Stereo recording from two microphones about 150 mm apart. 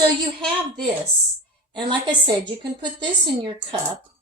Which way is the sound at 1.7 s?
30° right (ahead or behind).